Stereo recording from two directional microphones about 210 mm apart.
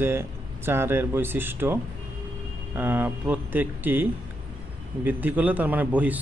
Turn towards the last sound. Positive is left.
turn(degrees=-5)  # may be behind; listen again after turning